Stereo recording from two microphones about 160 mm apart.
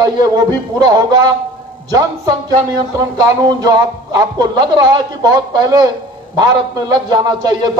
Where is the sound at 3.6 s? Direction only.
25° right (ahead or behind).